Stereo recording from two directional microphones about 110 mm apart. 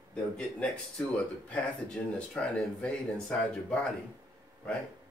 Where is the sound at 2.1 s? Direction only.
10° left (ahead or behind).